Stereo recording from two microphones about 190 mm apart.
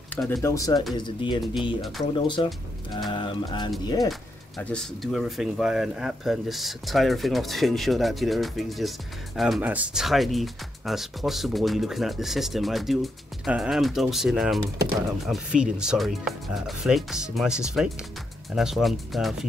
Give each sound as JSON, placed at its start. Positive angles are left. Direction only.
{"t": 0.1, "sound": "speech", "side_deg": 0}
{"t": 0.4, "sound": "speech", "side_deg": 15}
{"t": 4.1, "sound": "speech", "side_deg": 5}